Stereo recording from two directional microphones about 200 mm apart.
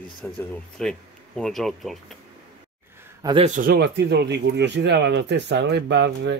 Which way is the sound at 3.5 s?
45° right (ahead or behind).